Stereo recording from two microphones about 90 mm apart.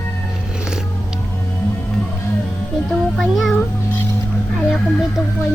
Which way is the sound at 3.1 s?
Centre (ahead or behind).